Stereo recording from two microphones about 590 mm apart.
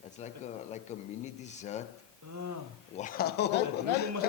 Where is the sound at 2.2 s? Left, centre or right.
Right.